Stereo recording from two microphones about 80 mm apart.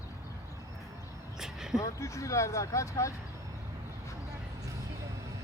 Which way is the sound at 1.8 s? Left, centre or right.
Left.